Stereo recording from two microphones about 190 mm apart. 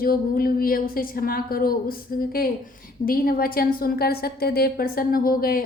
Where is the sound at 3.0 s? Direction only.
50° left (ahead or behind).